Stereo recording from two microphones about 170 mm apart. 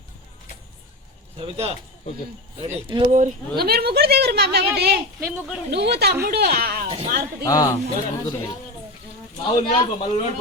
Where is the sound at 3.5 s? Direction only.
65° right (ahead or behind).